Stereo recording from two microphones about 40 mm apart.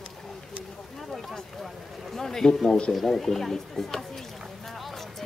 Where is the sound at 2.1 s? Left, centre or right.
Centre.